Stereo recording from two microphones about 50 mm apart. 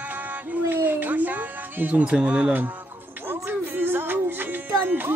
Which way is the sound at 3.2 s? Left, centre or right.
Right.